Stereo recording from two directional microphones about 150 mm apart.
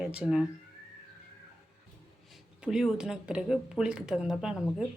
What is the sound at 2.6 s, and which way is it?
Speech, 5° right (ahead or behind).